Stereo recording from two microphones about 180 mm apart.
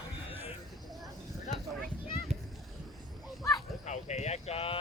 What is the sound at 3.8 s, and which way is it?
Clip-clop, 40° left (ahead or behind).